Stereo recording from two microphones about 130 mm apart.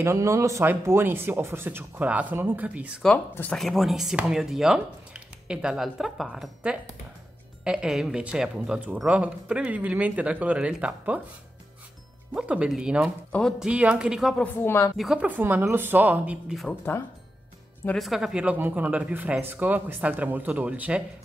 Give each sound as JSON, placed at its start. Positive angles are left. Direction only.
{"t": 0.0, "sound": "speech", "side_deg": -20}
{"t": 3.5, "sound": "speech", "side_deg": 0}
{"t": 12.4, "sound": "speech", "side_deg": -5}
{"t": 13.3, "sound": "speech", "side_deg": 5}
{"t": 13.7, "sound": "speech", "side_deg": -10}
{"t": 14.4, "sound": "speech", "side_deg": 15}
{"t": 15.0, "sound": "speech", "side_deg": -5}
{"t": 16.9, "sound": "speech", "side_deg": 15}
{"t": 17.9, "sound": "speech", "side_deg": 0}